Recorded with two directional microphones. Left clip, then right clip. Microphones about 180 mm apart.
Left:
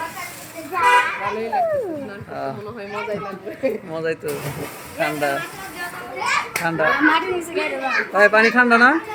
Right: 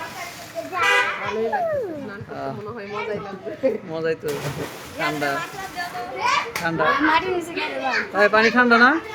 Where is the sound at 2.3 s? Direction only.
15° left (ahead or behind).